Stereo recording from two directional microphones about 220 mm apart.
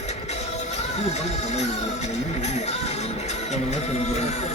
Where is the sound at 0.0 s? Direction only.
30° left (ahead or behind).